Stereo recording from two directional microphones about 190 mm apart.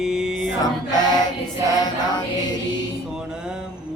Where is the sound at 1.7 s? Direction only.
20° left (ahead or behind).